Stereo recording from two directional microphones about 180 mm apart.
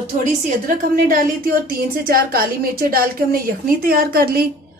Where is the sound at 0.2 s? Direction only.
50° right (ahead or behind).